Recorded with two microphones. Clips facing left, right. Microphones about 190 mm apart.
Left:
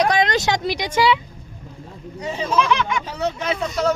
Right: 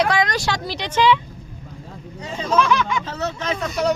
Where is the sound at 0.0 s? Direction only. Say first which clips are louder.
Left 2 dB; 20° left (ahead or behind).